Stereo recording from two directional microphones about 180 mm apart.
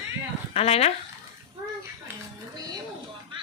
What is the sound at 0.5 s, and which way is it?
Speech, 35° left (ahead or behind).